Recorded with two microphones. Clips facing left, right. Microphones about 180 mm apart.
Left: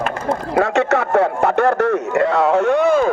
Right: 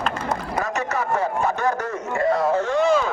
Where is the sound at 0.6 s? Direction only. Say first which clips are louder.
Left 12 dB; 70° left (ahead or behind).